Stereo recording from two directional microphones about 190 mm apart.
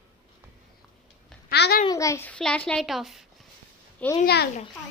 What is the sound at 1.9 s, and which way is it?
A child's voice, 15° left (ahead or behind).